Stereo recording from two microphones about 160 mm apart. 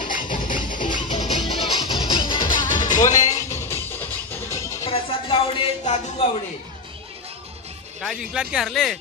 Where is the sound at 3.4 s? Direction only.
15° left (ahead or behind).